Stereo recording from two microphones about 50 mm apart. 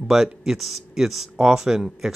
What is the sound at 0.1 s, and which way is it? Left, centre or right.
Speech, centre.